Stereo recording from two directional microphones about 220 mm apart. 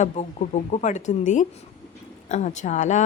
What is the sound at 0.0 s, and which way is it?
Speech, 30° left (ahead or behind).